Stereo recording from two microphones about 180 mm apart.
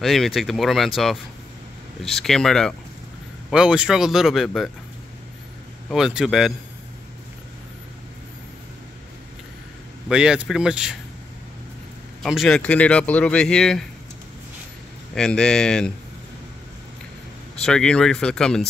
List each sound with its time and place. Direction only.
0.0 s speech: centre (ahead or behind)
5.9 s speech: centre (ahead or behind)
10.0 s speech: 5° right (ahead or behind)
12.2 s speech: centre (ahead or behind)
15.1 s speech: 5° left (ahead or behind)
17.6 s speech: 5° left (ahead or behind)